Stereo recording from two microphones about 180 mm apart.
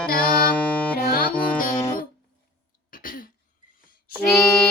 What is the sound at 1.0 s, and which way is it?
Music, 55° left (ahead or behind).